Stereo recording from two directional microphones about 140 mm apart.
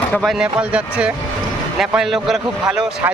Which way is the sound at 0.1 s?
5° left (ahead or behind).